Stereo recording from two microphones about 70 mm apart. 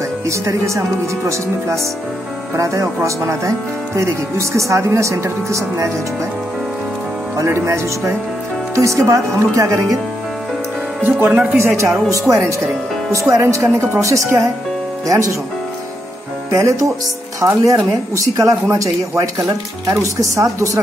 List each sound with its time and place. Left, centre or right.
0.3 s speech: right
7.4 s speech: right
11.0 s speech: right
16.4 s speech: right
20.3 s speech: right